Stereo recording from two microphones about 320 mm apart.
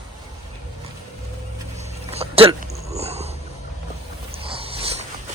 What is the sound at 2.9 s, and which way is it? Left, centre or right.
Boat, centre.